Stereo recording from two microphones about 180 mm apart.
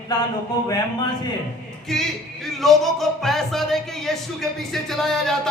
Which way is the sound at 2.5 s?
Centre (ahead or behind).